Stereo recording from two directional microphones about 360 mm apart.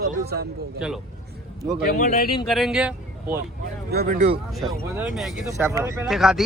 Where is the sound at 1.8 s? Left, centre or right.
Left.